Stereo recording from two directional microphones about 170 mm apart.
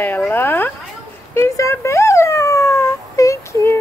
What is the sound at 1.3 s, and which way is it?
Dog, 15° left (ahead or behind).